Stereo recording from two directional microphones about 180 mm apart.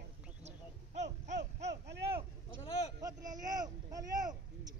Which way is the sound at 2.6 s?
35° left (ahead or behind).